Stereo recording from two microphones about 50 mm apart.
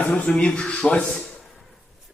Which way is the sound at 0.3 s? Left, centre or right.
Centre.